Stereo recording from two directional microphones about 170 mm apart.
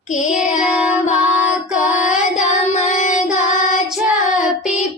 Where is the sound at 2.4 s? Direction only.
40° left (ahead or behind).